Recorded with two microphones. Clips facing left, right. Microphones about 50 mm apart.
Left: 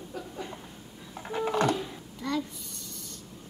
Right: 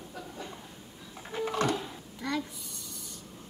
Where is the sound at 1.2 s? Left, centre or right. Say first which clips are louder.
Left 3 dB; centre.